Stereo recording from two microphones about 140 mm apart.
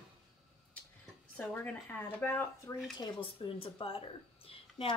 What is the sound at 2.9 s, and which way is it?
Speech, 35° left (ahead or behind).